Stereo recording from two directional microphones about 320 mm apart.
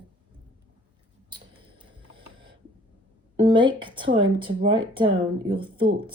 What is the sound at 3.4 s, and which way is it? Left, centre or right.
Speech, centre.